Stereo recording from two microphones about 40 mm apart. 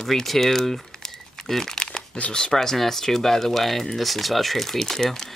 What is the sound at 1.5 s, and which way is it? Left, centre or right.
Crumpling, centre.